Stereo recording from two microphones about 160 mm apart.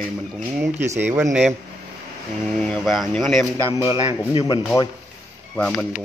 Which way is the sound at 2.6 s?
5° left (ahead or behind).